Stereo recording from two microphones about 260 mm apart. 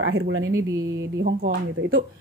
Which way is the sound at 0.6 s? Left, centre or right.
Centre.